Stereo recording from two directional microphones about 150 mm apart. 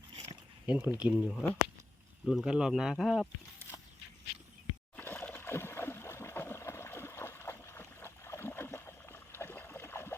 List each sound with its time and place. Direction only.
0.7 s speech: 10° right (ahead or behind)
4.9 s splash: 10° left (ahead or behind)